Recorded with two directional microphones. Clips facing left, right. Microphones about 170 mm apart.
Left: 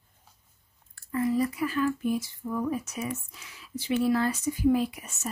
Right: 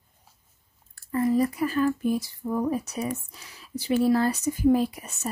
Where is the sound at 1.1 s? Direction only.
40° right (ahead or behind).